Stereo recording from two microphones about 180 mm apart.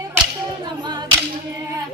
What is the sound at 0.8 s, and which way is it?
Clapping, 25° right (ahead or behind).